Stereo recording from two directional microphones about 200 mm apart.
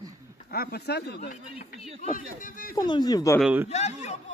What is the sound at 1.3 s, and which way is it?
Speech, 40° left (ahead or behind).